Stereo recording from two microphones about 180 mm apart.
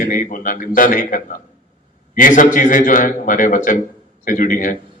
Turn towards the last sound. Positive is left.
turn(degrees=50)  # may be behind; listen again after turning